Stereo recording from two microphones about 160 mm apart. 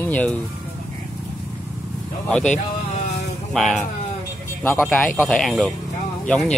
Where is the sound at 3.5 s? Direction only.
Centre (ahead or behind).